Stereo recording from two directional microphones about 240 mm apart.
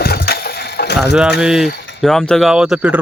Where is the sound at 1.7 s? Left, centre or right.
Left.